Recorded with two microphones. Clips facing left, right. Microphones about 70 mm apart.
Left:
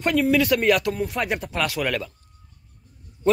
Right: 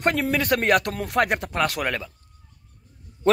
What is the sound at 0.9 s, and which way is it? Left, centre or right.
Speech, right.